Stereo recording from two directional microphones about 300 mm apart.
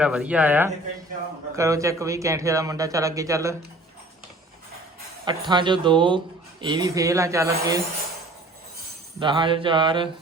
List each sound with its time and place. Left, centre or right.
0.0 s speech: centre
5.2 s speech: centre
9.2 s speech: centre